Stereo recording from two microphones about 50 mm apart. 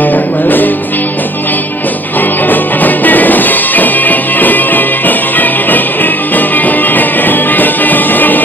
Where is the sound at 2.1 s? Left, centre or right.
Left.